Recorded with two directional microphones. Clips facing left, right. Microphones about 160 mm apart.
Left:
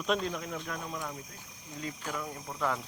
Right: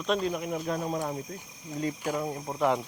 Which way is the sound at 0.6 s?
40° right (ahead or behind).